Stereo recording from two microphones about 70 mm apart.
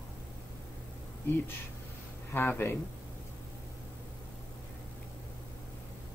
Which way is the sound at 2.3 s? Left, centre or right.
Left.